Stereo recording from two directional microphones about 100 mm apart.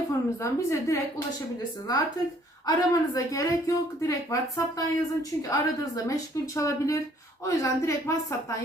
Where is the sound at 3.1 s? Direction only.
35° left (ahead or behind).